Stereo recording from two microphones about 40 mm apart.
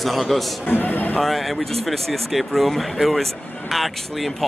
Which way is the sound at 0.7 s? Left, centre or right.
Left.